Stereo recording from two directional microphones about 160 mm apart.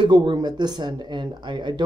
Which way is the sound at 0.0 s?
30° right (ahead or behind).